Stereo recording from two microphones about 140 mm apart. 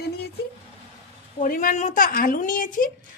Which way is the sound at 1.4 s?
75° left (ahead or behind).